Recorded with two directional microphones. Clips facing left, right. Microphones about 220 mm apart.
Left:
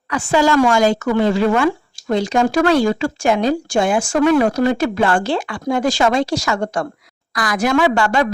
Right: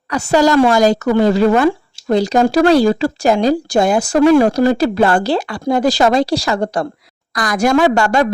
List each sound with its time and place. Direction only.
0.1 s speech: 40° right (ahead or behind)